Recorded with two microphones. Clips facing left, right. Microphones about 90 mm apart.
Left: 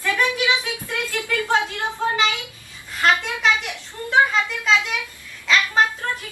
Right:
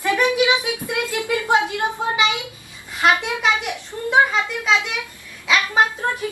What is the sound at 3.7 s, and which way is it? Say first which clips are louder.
Speech: right 2 dB; 15° right (ahead or behind).